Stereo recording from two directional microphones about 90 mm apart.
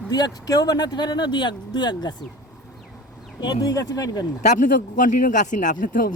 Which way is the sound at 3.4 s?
50° left (ahead or behind).